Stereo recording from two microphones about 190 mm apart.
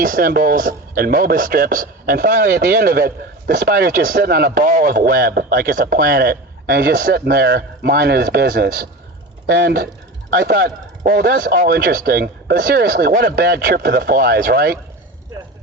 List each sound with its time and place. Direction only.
0.0 s speech: 50° right (ahead or behind)